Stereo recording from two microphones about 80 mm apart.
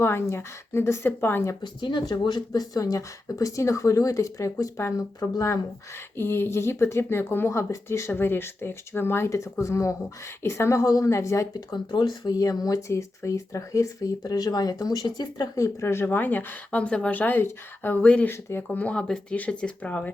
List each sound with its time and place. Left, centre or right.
0.0 s speech: left
1.6 s speech: left
6.1 s speech: left
11.5 s speech: left
14.3 s speech: left
15.0 s speech: left
15.5 s a woman's voice: left
16.8 s a woman's voice: centre
18.3 s a woman's voice: left
18.8 s speech: centre